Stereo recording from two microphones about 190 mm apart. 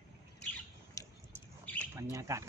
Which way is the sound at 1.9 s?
15° right (ahead or behind).